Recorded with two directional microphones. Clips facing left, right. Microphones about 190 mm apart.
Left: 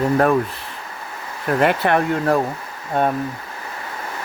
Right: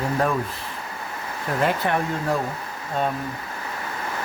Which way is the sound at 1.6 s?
70° left (ahead or behind).